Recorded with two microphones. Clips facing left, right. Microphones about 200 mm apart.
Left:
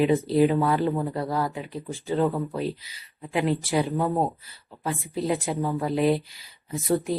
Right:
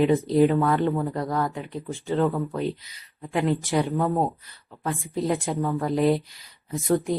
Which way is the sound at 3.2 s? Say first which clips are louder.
Right 1 dB; 15° left (ahead or behind).